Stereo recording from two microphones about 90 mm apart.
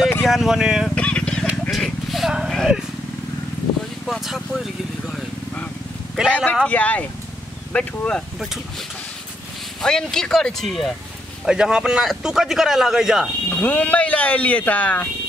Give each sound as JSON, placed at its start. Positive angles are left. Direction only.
{"t": 0.2, "sound": "speech", "side_deg": 0}
{"t": 0.8, "sound": "vehicle", "side_deg": 10}
{"t": 1.7, "sound": "a sound", "side_deg": 0}
{"t": 4.0, "sound": "speech", "side_deg": 0}
{"t": 6.2, "sound": "speech", "side_deg": -5}
{"t": 6.7, "sound": "speech", "side_deg": 15}
{"t": 9.8, "sound": "a man's voice", "side_deg": 5}
{"t": 11.4, "sound": "a man's voice", "side_deg": -10}
{"t": 13.5, "sound": "speech", "side_deg": 15}